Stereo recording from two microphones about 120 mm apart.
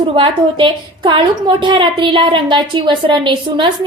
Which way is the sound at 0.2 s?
45° right (ahead or behind).